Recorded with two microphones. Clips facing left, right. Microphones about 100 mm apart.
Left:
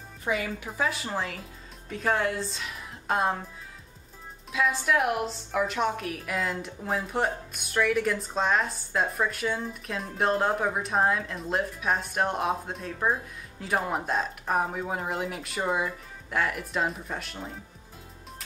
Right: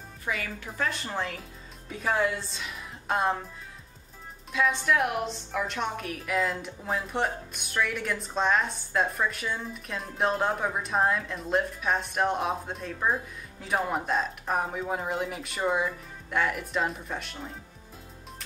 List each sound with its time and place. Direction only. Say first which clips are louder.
0.2 s a woman's voice: left 4 dB; 25° left (ahead or behind)
0.7 s a woman's voice: even; 5° left (ahead or behind)
4.5 s a woman's voice: even; centre (ahead or behind)